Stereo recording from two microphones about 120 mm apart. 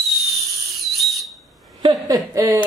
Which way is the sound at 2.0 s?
30° right (ahead or behind).